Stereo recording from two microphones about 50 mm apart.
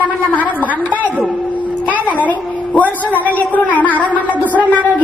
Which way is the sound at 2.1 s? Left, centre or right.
Left.